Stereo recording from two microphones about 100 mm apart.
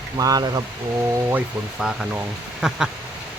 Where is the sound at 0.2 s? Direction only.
40° right (ahead or behind).